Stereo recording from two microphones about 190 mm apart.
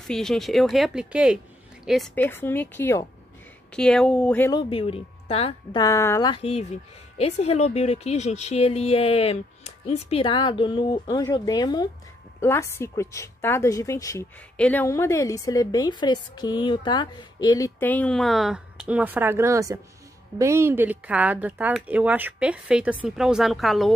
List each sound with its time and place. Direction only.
0.0 s speech: centre (ahead or behind)
2.1 s a woman's voice: 10° left (ahead or behind)
4.5 s a woman's voice: 25° left (ahead or behind); by 23.9 s centre (ahead or behind)